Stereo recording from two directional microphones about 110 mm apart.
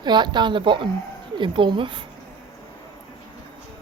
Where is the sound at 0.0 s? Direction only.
45° right (ahead or behind).